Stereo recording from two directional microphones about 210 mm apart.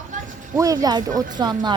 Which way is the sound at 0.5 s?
15° right (ahead or behind).